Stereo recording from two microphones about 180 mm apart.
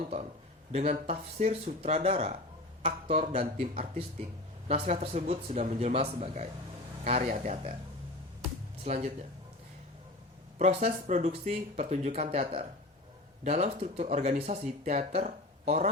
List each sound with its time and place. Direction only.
0.7 s speech: 35° right (ahead or behind)
8.8 s speech: 40° right (ahead or behind)
10.6 s speech: 40° right (ahead or behind)